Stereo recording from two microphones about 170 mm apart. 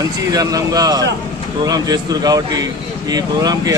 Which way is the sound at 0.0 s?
20° right (ahead or behind).